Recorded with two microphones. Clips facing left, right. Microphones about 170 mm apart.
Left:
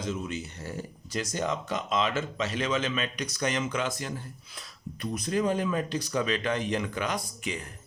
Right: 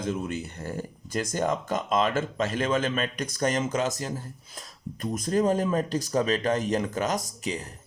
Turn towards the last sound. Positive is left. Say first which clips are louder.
# right 3 dB
turn(degrees=-35)  # may be behind; listen again after turning